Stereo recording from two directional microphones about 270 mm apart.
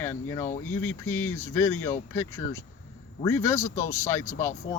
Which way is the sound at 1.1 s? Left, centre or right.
Left.